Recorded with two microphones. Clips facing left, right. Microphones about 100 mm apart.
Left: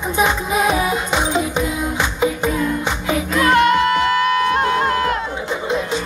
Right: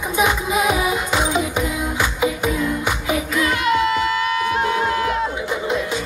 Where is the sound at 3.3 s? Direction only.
60° left (ahead or behind).